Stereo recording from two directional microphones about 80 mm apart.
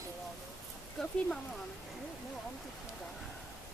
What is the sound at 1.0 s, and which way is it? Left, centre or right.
Speech, centre.